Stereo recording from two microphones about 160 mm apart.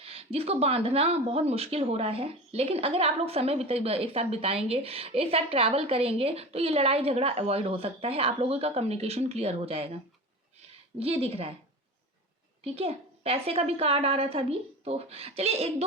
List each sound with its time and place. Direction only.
0.0 s speech: 40° right (ahead or behind)
11.0 s speech: 40° right (ahead or behind)
12.6 s speech: 40° right (ahead or behind)